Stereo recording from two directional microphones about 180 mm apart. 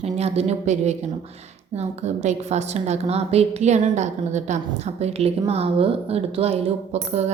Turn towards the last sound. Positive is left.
turn(degrees=-40)  # may be behind; listen again after turning